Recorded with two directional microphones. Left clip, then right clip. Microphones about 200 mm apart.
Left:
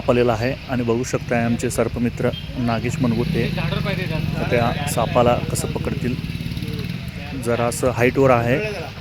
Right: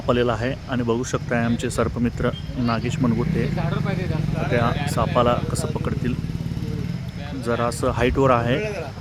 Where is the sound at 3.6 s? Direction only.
50° right (ahead or behind).